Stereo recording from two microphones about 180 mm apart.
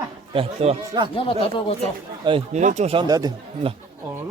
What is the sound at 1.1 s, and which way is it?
Speech, 30° left (ahead or behind).